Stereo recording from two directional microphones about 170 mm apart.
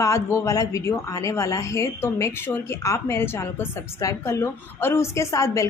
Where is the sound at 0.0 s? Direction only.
15° left (ahead or behind).